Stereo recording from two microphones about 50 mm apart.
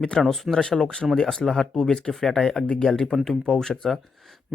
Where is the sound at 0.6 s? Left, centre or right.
Centre.